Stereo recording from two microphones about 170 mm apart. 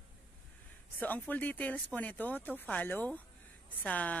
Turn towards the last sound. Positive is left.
turn(degrees=10)  # may be behind; listen again after turning